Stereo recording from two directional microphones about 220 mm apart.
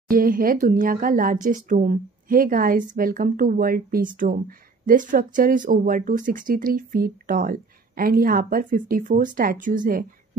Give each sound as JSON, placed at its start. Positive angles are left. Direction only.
{"t": 0.1, "sound": "speech", "side_deg": -40}